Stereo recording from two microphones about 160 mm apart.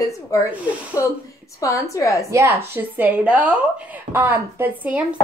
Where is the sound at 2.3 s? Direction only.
15° right (ahead or behind).